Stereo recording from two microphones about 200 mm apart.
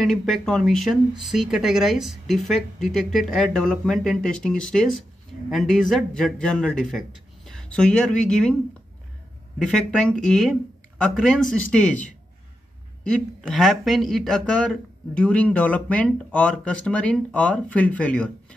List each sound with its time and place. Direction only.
0.0 s speech: centre (ahead or behind)
9.6 s speech: 5° left (ahead or behind)